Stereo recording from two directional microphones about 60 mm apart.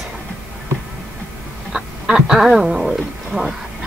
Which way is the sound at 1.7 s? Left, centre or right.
Centre.